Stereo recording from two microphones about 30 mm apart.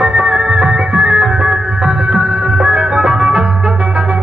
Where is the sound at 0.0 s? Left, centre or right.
Right.